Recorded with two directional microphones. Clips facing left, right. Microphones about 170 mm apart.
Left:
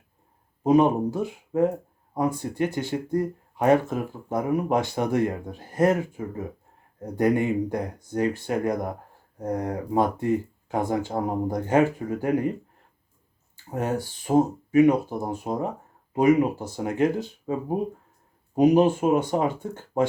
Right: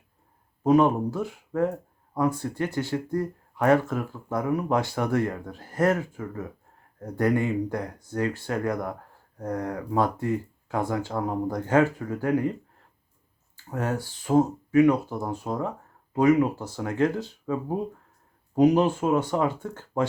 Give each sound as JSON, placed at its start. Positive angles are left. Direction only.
{"t": 0.6, "sound": "speech", "side_deg": 20}
{"t": 13.7, "sound": "speech", "side_deg": 20}